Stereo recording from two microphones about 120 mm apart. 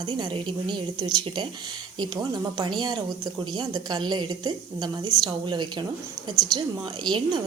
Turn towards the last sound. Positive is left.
turn(degrees=-40)  # may be behind; listen again after turning